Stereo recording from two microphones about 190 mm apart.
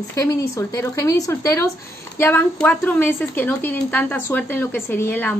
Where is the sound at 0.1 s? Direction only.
15° left (ahead or behind).